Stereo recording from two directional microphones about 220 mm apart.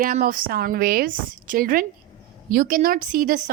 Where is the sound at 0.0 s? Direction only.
35° right (ahead or behind).